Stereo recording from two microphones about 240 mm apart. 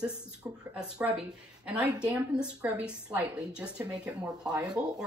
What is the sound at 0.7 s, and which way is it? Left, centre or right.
Speech, centre.